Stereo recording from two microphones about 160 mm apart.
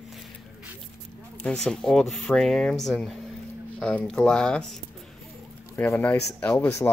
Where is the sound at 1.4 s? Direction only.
5° left (ahead or behind).